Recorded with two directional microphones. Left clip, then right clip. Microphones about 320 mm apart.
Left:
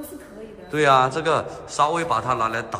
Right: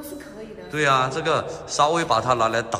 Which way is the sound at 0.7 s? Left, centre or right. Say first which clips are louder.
Left 3 dB; centre.